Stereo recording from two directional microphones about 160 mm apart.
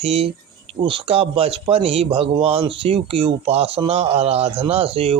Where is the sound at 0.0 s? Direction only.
40° right (ahead or behind).